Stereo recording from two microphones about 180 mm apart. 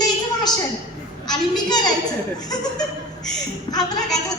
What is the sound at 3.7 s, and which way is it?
Speech, 20° left (ahead or behind).